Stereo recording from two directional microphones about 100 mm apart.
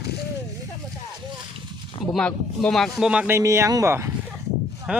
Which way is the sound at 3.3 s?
30° right (ahead or behind).